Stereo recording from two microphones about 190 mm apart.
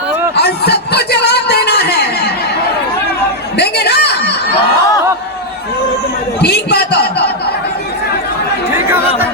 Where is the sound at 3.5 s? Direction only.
60° left (ahead or behind).